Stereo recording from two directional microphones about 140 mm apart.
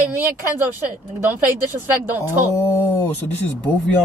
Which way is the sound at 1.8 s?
15° right (ahead or behind).